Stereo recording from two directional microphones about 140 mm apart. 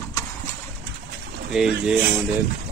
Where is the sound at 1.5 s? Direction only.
5° right (ahead or behind).